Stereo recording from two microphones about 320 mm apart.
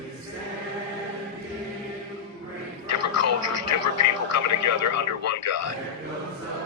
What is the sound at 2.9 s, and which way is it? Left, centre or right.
Speech, left.